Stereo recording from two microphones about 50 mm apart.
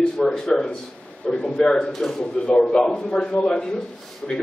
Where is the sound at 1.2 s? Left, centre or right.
Left.